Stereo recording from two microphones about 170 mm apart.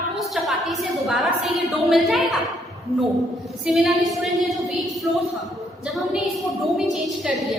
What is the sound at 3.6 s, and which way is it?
A woman's voice, centre (ahead or behind).